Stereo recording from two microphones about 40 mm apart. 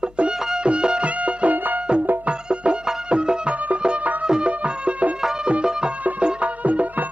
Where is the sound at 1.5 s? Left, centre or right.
Right.